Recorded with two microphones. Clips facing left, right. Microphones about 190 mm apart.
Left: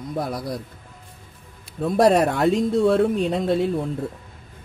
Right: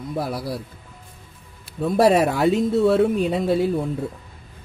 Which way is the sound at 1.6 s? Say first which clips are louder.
Even; centre (ahead or behind).